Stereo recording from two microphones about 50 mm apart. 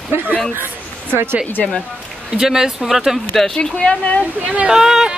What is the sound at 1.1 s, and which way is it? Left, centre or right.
Speech, right.